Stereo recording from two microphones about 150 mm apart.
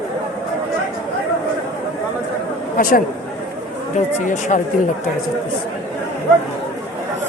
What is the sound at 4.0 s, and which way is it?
Speech, 55° left (ahead or behind).